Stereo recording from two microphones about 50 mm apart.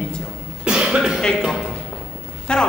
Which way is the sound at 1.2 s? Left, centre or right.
Centre.